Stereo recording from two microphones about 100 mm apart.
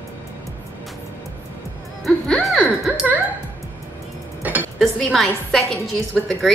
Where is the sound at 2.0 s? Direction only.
Centre (ahead or behind).